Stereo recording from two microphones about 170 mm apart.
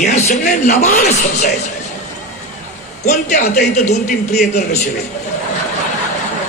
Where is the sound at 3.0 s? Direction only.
45° left (ahead or behind).